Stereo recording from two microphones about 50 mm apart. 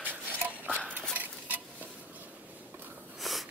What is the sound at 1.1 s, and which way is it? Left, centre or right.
Stir, right.